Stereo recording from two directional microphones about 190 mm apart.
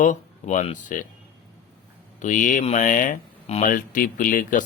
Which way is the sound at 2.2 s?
45° left (ahead or behind).